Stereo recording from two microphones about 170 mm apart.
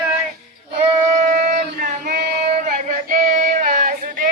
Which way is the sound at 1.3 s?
60° right (ahead or behind).